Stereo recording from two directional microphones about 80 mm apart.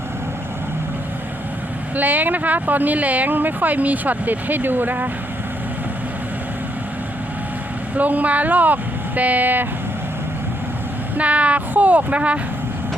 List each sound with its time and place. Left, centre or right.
2.0 s speech: right
7.9 s speech: centre
11.2 s speech: centre